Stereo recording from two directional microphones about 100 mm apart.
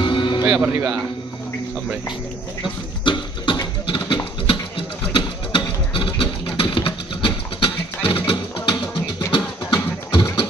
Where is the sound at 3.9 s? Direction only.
55° left (ahead or behind).